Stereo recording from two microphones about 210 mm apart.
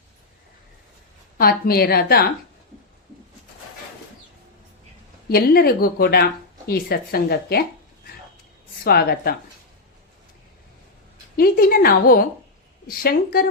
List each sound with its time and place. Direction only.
1.4 s a woman's voice: 45° left (ahead or behind)
5.3 s a woman's voice: 45° left (ahead or behind)
8.8 s a woman's voice: 50° left (ahead or behind)
11.3 s a woman's voice: 45° left (ahead or behind)